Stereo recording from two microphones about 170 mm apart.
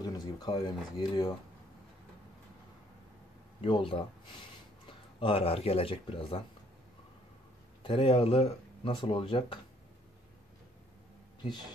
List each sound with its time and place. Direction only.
0.0 s speech: 25° left (ahead or behind)
3.6 s speech: 30° left (ahead or behind)
7.8 s speech: 30° left (ahead or behind)